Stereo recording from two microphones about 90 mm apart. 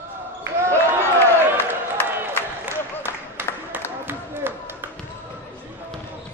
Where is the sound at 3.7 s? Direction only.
20° right (ahead or behind).